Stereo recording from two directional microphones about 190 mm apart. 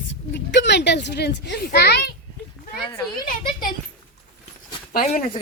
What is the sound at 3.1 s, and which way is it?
Speech, 50° left (ahead or behind).